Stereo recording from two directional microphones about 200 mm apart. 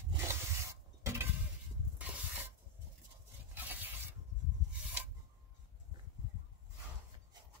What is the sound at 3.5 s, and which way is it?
Filing, 10° right (ahead or behind).